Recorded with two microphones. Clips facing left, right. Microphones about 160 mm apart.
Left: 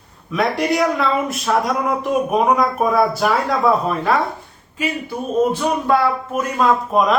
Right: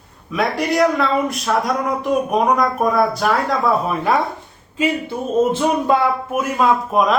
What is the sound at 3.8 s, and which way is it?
Speech, 10° right (ahead or behind).